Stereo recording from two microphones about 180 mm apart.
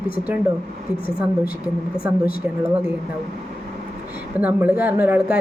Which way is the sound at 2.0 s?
15° right (ahead or behind).